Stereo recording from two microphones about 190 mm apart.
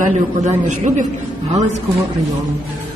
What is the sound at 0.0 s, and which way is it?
A man's voice, 40° right (ahead or behind).